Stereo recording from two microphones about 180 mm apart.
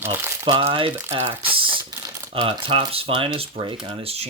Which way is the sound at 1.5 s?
30° right (ahead or behind).